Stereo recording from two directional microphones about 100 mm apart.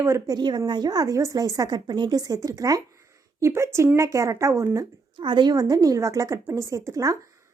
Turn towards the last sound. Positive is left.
turn(degrees=-35)  # may be behind; listen again after turning